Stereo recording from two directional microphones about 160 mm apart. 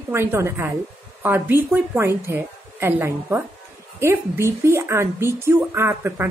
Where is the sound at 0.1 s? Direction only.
15° right (ahead or behind).